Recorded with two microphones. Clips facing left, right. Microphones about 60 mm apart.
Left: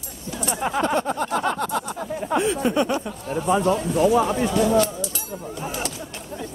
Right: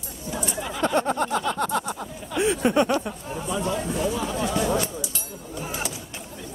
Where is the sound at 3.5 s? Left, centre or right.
Left.